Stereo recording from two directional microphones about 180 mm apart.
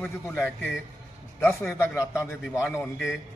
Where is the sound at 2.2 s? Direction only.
15° left (ahead or behind).